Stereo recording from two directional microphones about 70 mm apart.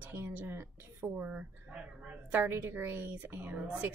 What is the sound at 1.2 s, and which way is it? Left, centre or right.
Speech, centre.